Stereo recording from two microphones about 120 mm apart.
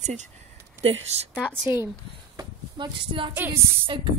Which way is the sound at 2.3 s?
40° right (ahead or behind).